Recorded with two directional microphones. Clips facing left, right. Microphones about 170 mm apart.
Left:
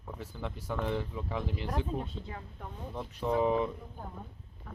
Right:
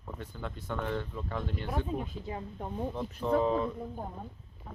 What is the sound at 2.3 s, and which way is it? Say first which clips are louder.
Speech: right 6 dB; 25° right (ahead or behind).